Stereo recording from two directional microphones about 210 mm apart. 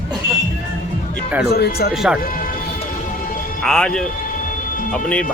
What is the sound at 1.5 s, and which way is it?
Speech, 50° left (ahead or behind).